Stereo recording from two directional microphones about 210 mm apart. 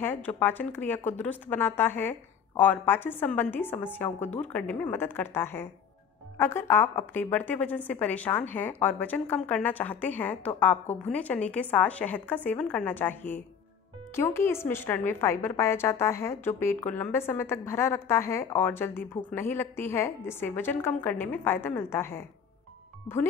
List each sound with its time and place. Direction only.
0.0 s a woman's voice: 10° left (ahead or behind)